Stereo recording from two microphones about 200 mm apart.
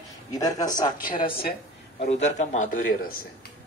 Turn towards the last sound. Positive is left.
turn(degrees=45)  # may be behind; listen again after turning